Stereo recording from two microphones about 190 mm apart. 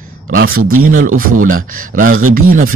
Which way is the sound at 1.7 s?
45° right (ahead or behind).